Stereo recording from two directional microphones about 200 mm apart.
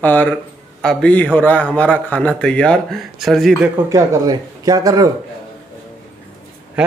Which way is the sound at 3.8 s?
15° right (ahead or behind).